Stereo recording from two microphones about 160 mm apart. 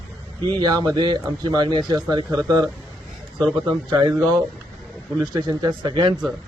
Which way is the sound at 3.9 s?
25° right (ahead or behind).